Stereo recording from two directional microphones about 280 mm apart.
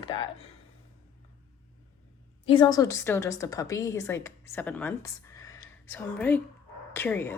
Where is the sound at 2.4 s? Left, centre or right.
Centre.